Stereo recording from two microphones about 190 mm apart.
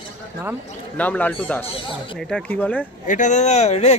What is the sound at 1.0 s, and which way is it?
A man's voice, 10° left (ahead or behind).